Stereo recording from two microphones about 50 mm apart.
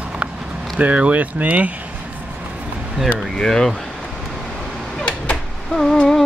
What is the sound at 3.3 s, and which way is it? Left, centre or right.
Speech, centre.